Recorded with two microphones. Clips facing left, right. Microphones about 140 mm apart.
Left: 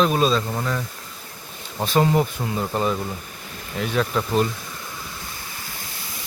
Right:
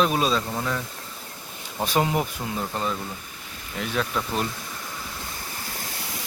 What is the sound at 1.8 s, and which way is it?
Speech, 10° right (ahead or behind).